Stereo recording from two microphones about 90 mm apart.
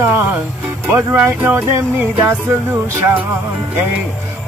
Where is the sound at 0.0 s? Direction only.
25° right (ahead or behind).